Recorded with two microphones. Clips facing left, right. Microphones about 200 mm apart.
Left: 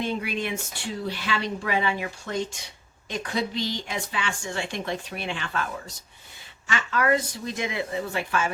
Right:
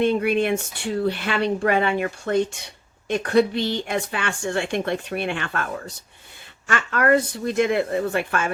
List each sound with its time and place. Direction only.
0.0 s a woman's voice: 55° right (ahead or behind)